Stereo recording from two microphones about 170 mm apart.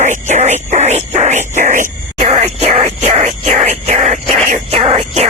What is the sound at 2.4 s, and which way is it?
Groan, 35° right (ahead or behind).